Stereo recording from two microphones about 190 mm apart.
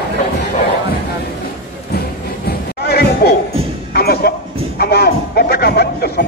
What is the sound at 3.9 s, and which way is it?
Music, 55° left (ahead or behind).